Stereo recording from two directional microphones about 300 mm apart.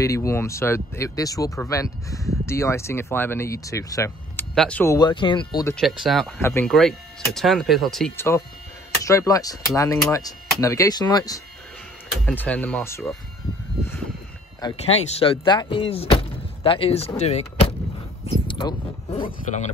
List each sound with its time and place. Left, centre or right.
0.0 s speech: centre
5.8 s speech: centre
14.6 s speech: centre